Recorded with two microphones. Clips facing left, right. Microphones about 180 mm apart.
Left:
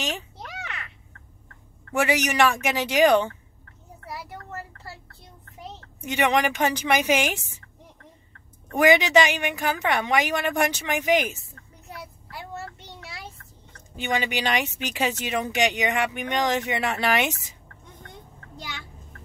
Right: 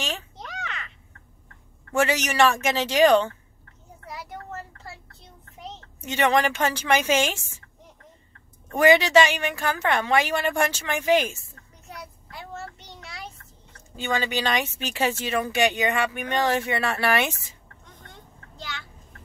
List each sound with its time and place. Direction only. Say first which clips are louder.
0.0 s a sound: left 1 dB; 10° left (ahead or behind)
2.0 s speech: even; 15° left (ahead or behind)
5.9 s speech: right 1 dB; 15° left (ahead or behind)
8.7 s speech: right 1 dB; 15° left (ahead or behind)
13.9 s speech: even; 15° left (ahead or behind)